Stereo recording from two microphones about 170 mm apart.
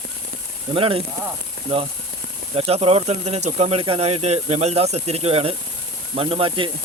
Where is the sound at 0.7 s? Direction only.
35° right (ahead or behind).